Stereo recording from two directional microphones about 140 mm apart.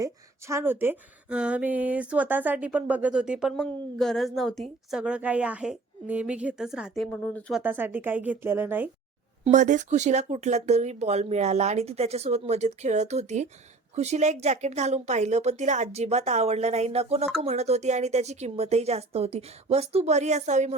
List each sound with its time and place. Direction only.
0.0 s a woman's voice: 20° right (ahead or behind); by 7.5 s 10° left (ahead or behind)
7.6 s speech: 15° right (ahead or behind)
9.5 s speech: 60° right (ahead or behind)